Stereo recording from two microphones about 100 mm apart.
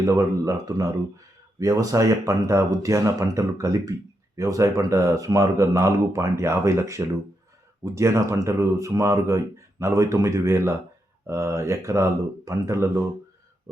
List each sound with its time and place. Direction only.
0.0 s speech: 30° right (ahead or behind)